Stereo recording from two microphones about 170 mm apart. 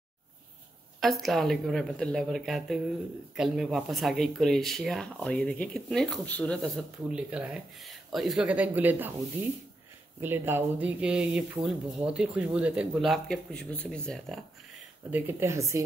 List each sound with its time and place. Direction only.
1.0 s speech: centre (ahead or behind)
10.2 s speech: 15° right (ahead or behind); by 14.4 s centre (ahead or behind)
15.0 s speech: 10° right (ahead or behind)